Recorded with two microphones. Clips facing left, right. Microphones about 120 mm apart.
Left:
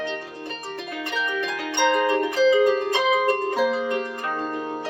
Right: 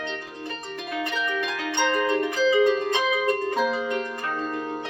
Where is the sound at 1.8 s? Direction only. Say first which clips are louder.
Left 3 dB; centre (ahead or behind).